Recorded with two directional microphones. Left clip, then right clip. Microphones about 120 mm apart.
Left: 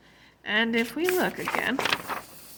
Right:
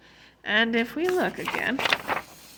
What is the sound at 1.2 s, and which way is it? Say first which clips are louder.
Speech: even; 10° right (ahead or behind).